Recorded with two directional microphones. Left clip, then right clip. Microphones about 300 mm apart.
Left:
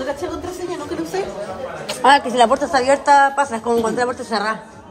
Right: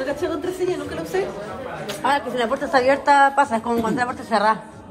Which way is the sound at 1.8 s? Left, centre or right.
Left.